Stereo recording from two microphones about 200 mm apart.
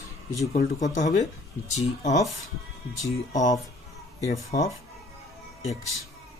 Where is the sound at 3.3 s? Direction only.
40° left (ahead or behind).